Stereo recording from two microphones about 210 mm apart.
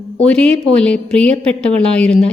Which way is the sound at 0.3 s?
5° left (ahead or behind).